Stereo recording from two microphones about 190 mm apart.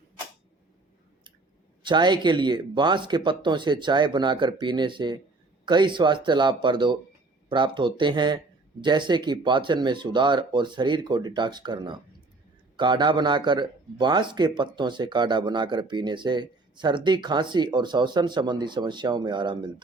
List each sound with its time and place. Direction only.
1.8 s speech: 25° right (ahead or behind)